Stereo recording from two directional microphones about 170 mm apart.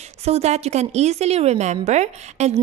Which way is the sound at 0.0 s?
40° right (ahead or behind).